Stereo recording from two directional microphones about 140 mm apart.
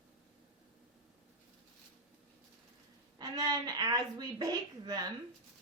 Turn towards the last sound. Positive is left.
turn(degrees=-30)  # may be behind; listen again after turning